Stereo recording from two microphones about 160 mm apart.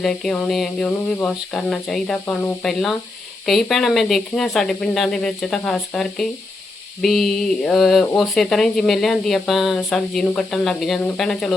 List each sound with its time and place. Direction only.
0.0 s speech: 5° left (ahead or behind)